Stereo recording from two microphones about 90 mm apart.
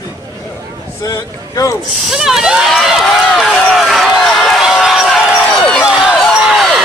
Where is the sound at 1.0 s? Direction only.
40° left (ahead or behind).